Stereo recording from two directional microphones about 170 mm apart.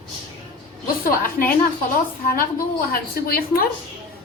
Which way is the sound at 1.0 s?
55° left (ahead or behind).